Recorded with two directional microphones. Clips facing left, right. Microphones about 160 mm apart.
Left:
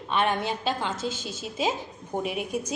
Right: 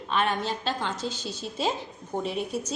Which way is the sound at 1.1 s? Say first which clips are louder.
Even; 50° left (ahead or behind).